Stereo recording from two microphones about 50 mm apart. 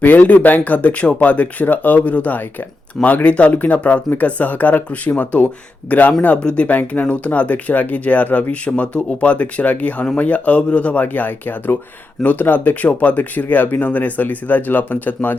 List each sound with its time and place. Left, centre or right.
0.0 s speech: left
6.6 s speech: left